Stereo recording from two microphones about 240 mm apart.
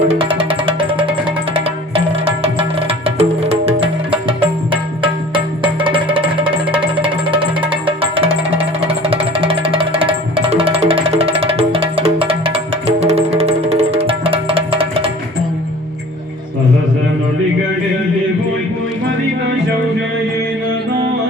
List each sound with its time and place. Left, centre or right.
0.1 s music: right